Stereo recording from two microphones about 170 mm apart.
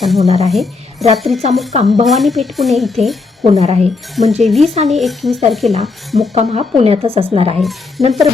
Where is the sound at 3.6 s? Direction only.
40° right (ahead or behind).